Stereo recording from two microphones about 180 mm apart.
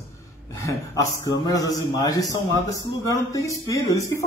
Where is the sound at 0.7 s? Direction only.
15° left (ahead or behind).